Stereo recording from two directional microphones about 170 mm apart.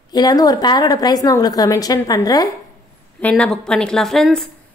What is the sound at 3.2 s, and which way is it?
A woman's voice, 5° left (ahead or behind).